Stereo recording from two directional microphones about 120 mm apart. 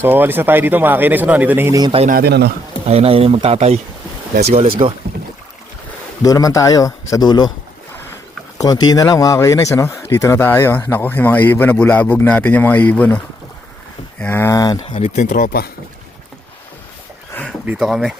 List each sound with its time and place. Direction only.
0.0 s speech: 15° right (ahead or behind)
1.9 s a man's voice: 50° right (ahead or behind)
6.2 s a man's voice: 30° left (ahead or behind)
8.5 s speech: 35° left (ahead or behind)
14.9 s speech: 75° left (ahead or behind)
17.3 s a sound: 15° left (ahead or behind)
17.7 s speech: centre (ahead or behind)